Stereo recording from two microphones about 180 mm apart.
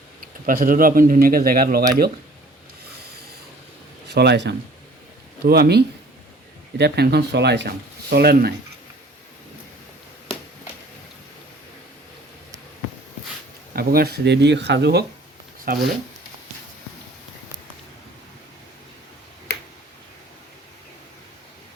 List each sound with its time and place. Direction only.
0.2 s speech: 50° right (ahead or behind)
4.1 s speech: 70° right (ahead or behind)
8.1 s speech: 60° right (ahead or behind)
13.7 s speech: 60° right (ahead or behind)
15.7 s speech: 55° right (ahead or behind)